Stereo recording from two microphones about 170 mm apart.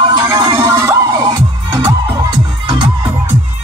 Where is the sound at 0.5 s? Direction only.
20° right (ahead or behind).